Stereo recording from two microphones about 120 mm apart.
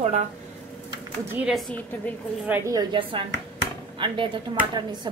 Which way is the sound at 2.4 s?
15° right (ahead or behind).